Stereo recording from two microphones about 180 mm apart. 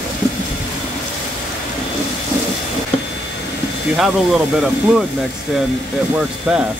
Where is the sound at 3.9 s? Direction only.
Centre (ahead or behind).